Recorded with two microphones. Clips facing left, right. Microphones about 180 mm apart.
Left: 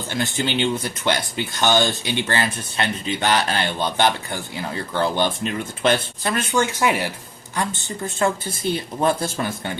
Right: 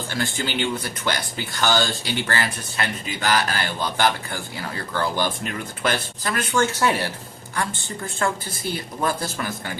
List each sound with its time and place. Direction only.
0.1 s speech: 20° left (ahead or behind)